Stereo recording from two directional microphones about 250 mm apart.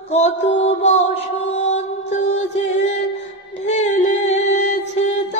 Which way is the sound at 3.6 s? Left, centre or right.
Left.